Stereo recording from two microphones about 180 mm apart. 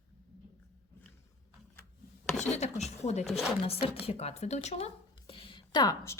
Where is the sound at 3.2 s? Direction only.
Centre (ahead or behind).